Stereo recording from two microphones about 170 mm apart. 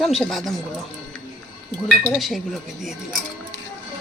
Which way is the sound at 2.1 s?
Centre (ahead or behind).